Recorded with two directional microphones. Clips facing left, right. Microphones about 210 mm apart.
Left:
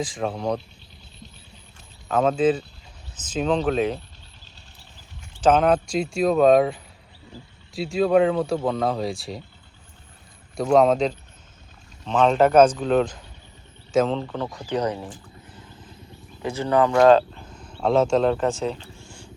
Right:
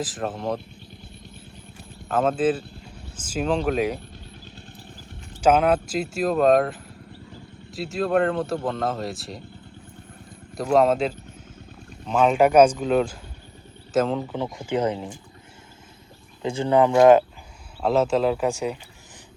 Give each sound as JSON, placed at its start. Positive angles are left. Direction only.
{"t": 0.0, "sound": "speech", "side_deg": -5}
{"t": 2.0, "sound": "speech", "side_deg": -5}
{"t": 5.4, "sound": "speech", "side_deg": -10}
{"t": 7.8, "sound": "speech", "side_deg": 0}
{"t": 10.6, "sound": "speech", "side_deg": 0}
{"t": 14.3, "sound": "speech", "side_deg": -15}
{"t": 16.4, "sound": "speech", "side_deg": -25}
{"t": 17.7, "sound": "speech", "side_deg": -5}